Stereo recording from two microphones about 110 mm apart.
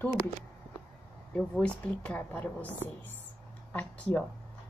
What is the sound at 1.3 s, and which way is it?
Speech, 10° left (ahead or behind).